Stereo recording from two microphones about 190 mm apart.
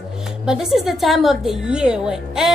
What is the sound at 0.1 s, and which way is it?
A woman's voice, 5° right (ahead or behind).